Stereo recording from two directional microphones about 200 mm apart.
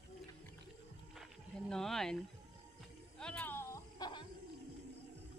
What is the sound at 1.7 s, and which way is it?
Speech, centre (ahead or behind).